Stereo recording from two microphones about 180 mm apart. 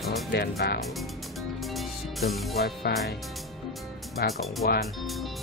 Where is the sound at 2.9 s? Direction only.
60° left (ahead or behind).